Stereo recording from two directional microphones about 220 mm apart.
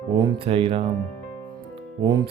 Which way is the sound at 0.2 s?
20° right (ahead or behind).